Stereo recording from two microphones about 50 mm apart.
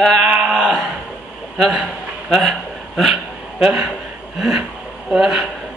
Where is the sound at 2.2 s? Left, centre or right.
Centre.